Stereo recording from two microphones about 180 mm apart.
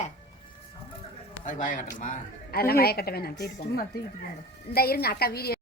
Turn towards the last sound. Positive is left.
turn(degrees=60)  # may be behind; listen again after turning